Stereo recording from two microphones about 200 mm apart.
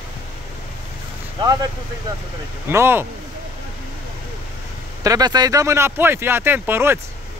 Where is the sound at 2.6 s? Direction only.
10° right (ahead or behind).